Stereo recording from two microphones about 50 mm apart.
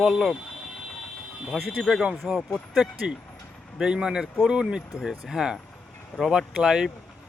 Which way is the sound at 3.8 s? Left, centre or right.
Centre.